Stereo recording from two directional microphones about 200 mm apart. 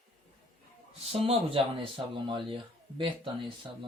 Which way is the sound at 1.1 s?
30° right (ahead or behind).